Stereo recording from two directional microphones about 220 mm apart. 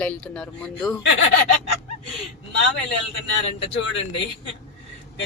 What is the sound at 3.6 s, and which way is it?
Speech, 60° left (ahead or behind).